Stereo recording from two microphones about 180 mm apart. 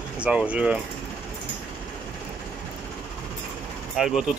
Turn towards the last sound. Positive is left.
turn(degrees=-5)  # may be behind; listen again after turning